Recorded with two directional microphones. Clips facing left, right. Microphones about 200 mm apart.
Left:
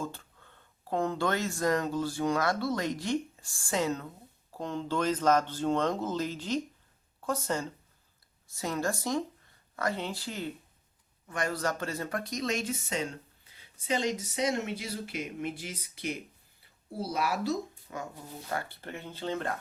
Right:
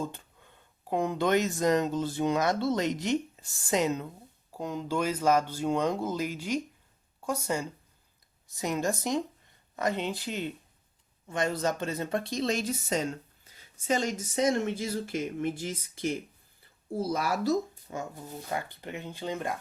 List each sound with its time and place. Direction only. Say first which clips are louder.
0.0 s speech: right 2 dB; 20° right (ahead or behind); by 17.6 s 45° right (ahead or behind)
17.9 s speech: right 3 dB; 30° right (ahead or behind)
18.5 s speech: right 1 dB; 15° right (ahead or behind)